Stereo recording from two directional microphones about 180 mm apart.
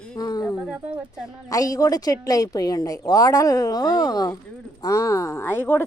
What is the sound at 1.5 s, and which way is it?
A woman's voice, 20° left (ahead or behind).